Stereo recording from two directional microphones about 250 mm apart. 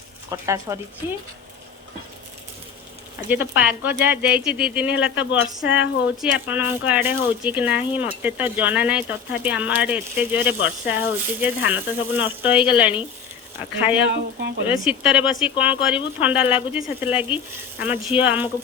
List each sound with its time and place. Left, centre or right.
0.3 s speech: centre
3.2 s speech: centre
14.1 s speech: right
14.7 s speech: centre